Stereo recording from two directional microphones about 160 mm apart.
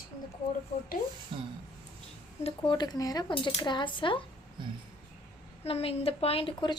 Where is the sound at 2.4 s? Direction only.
30° left (ahead or behind).